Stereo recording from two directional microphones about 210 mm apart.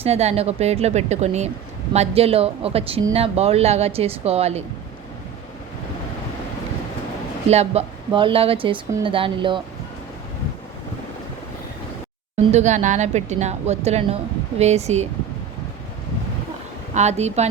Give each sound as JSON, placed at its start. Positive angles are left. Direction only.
{"t": 0.0, "sound": "a woman's voice", "side_deg": -30}
{"t": 7.5, "sound": "speech", "side_deg": -30}
{"t": 12.5, "sound": "a woman's voice", "side_deg": -35}
{"t": 16.9, "sound": "a woman's voice", "side_deg": -30}